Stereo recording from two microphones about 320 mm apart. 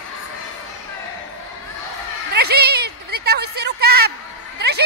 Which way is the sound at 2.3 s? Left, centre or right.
Right.